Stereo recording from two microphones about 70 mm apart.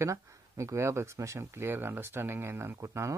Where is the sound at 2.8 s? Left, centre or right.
Right.